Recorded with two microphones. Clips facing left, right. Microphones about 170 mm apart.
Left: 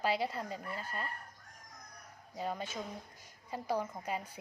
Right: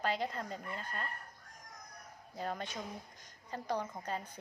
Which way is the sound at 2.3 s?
5° left (ahead or behind).